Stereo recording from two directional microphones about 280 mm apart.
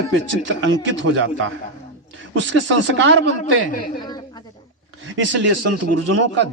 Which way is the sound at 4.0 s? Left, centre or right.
Centre.